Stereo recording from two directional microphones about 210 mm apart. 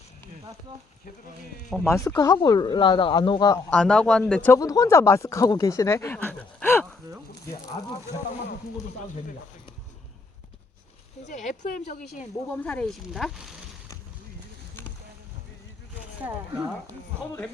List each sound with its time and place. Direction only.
1.7 s speech: 10° left (ahead or behind)
3.7 s speech: 5° left (ahead or behind)
11.3 s speech: 35° left (ahead or behind)
12.5 s speech: 10° left (ahead or behind)